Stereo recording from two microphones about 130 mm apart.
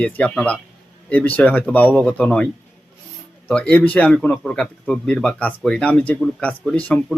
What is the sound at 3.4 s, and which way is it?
A man's voice, 10° left (ahead or behind).